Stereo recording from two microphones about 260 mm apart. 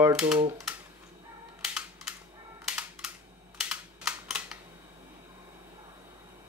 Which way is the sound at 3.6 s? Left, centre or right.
Centre.